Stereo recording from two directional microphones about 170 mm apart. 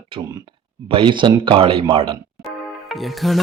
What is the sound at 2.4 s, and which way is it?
Music, centre (ahead or behind).